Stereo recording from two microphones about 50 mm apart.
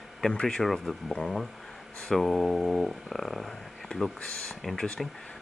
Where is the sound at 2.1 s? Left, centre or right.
Centre.